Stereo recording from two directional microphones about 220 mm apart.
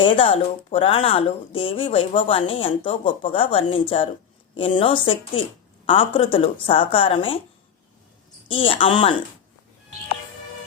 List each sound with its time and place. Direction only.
0.0 s speech: 25° left (ahead or behind)
8.4 s speech: 25° left (ahead or behind)